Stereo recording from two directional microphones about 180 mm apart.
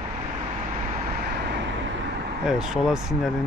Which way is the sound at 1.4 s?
80° right.